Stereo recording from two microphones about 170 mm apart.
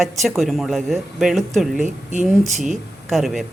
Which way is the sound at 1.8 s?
45° right (ahead or behind).